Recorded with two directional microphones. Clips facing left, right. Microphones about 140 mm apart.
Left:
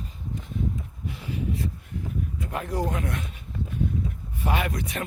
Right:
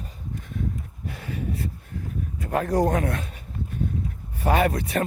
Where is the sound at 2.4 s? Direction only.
40° right (ahead or behind).